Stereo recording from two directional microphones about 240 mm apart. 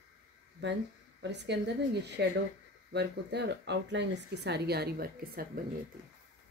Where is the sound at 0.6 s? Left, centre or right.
Right.